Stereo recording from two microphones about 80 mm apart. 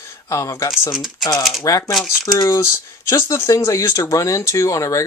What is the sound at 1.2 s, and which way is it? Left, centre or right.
Speech, left.